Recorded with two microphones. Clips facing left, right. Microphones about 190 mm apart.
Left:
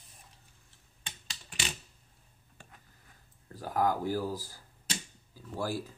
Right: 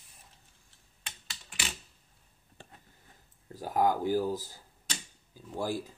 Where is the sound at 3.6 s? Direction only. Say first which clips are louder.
Right 2 dB; 20° right (ahead or behind).